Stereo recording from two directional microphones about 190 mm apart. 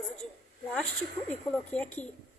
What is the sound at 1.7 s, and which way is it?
Speech, 5° left (ahead or behind).